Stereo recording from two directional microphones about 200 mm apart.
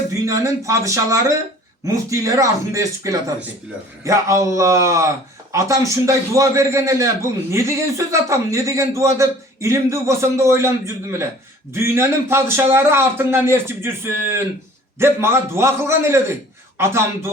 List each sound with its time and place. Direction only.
0.1 s a man's voice: 15° right (ahead or behind)